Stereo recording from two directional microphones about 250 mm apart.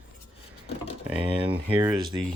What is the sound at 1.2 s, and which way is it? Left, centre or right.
Speech, right.